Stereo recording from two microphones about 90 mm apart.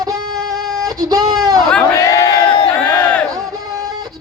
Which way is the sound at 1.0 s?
45° right (ahead or behind).